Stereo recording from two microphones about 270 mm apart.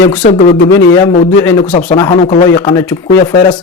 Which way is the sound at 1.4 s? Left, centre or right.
Centre.